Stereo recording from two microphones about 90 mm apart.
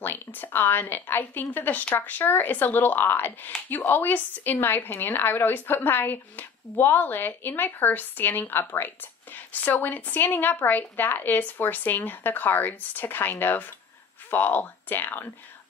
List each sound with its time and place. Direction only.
0.0 s a woman's voice: 20° left (ahead or behind)